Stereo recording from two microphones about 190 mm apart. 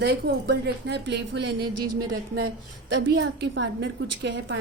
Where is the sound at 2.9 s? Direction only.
65° right (ahead or behind).